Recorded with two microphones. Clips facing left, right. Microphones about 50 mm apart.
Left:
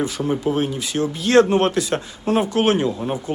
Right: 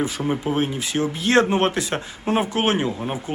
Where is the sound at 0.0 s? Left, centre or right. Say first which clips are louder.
Left 2 dB; right.